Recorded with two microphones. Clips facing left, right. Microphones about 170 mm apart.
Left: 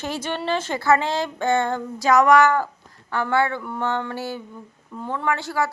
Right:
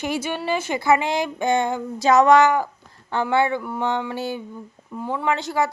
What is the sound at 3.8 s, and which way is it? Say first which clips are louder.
A woman's voice: even; 15° right (ahead or behind).